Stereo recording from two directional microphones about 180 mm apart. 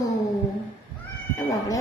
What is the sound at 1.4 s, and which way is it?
Speech, 20° left (ahead or behind).